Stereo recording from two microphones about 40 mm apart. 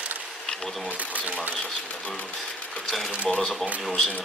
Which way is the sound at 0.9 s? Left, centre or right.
Right.